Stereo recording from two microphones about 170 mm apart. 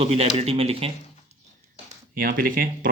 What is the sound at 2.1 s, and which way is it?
Speech, 55° right (ahead or behind).